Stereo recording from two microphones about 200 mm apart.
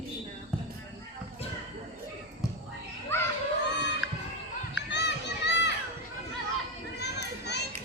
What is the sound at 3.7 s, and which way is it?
Crowd, 60° left (ahead or behind).